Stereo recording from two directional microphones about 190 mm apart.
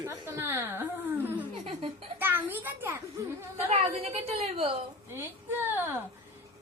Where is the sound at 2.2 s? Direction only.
10° right (ahead or behind).